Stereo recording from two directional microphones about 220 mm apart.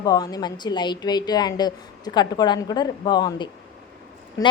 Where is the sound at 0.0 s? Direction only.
15° left (ahead or behind).